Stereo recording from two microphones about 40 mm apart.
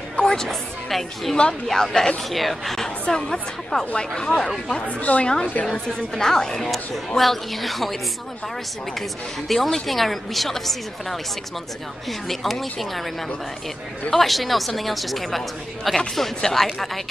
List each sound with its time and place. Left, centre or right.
0.1 s a sound: centre
0.8 s a woman's voice: centre
4.7 s speech: left
5.2 s a woman's voice: left
6.1 s speech: centre
7.2 s a woman's voice: centre
9.5 s a woman's voice: centre
14.1 s a woman's voice: centre